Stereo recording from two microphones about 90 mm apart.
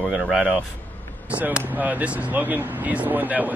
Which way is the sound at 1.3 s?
15° right (ahead or behind).